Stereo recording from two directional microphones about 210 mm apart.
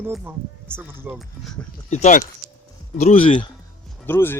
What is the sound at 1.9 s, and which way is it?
Speech, 35° left (ahead or behind).